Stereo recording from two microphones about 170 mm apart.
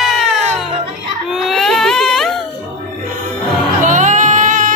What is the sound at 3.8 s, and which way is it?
Music, 45° right (ahead or behind).